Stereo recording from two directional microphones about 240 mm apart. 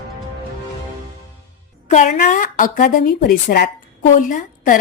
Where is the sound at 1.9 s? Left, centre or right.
Left.